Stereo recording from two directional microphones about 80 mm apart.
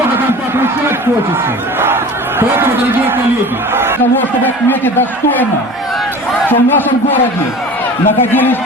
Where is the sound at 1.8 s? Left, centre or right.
Right.